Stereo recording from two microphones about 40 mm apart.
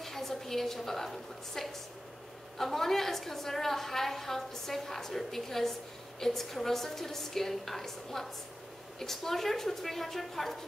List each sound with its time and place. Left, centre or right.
0.0 s a woman's voice: centre